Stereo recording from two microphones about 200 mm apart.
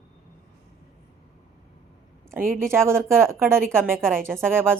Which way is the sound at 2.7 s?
15° right (ahead or behind).